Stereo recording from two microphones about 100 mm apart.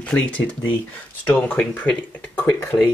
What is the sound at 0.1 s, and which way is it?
Speech, 20° left (ahead or behind).